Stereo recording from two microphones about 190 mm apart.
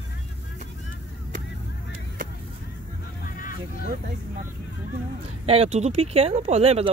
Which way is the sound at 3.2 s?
45° left (ahead or behind).